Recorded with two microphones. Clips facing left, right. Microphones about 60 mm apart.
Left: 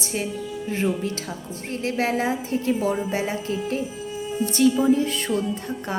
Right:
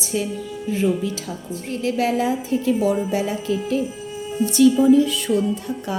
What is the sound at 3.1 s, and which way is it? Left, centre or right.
Speech, left.